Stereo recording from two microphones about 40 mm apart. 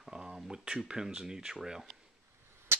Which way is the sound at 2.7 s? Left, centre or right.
Right.